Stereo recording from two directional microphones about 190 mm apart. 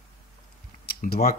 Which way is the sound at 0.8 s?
55° left (ahead or behind).